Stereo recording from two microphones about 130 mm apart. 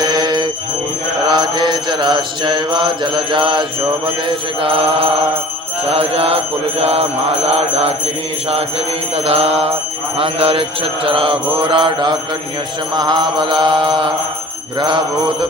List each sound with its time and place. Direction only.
0.0 s bell: 35° right (ahead or behind)
1.3 s mantra: 35° right (ahead or behind)
9.1 s mantra: 50° right (ahead or behind)